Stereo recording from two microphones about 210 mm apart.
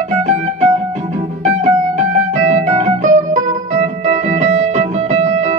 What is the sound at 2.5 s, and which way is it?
Music, 35° right (ahead or behind).